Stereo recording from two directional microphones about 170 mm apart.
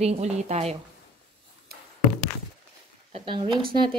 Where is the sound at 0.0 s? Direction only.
40° right (ahead or behind).